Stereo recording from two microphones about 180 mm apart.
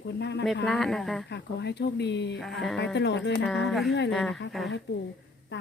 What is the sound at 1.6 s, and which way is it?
Speech, 70° left (ahead or behind).